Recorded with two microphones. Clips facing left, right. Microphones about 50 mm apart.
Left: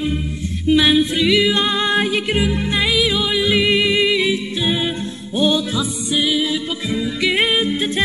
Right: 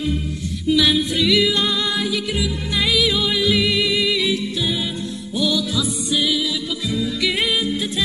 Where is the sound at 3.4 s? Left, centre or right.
Left.